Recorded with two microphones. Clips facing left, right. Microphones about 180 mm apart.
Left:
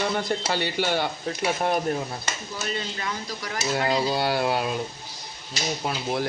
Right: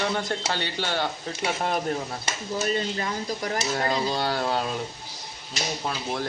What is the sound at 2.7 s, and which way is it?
Speech, 40° right (ahead or behind).